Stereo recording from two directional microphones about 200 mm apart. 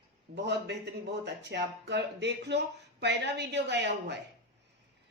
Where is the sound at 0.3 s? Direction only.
55° right (ahead or behind).